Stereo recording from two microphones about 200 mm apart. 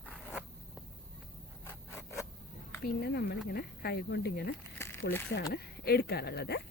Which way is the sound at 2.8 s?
55° left (ahead or behind).